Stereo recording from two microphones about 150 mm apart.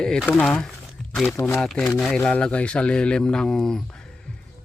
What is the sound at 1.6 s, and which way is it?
Speech, 5° left (ahead or behind).